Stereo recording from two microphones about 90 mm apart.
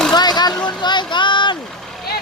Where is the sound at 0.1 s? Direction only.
50° left (ahead or behind).